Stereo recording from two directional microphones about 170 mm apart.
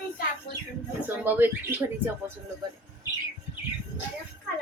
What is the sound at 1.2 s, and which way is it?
Speech, 10° right (ahead or behind).